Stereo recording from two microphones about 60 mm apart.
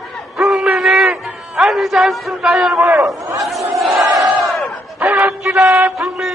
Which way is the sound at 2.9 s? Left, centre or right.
Right.